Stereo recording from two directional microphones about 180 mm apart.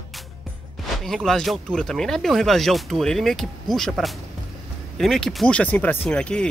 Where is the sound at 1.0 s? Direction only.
Centre (ahead or behind).